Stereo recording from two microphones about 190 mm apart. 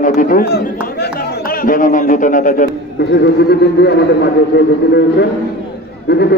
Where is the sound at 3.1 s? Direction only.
60° left (ahead or behind).